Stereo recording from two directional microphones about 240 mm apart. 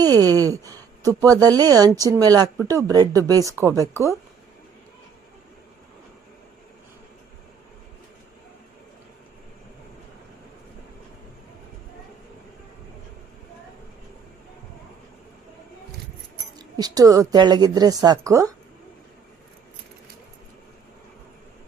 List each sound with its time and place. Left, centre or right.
0.0 s a woman's voice: centre
16.6 s a woman's voice: centre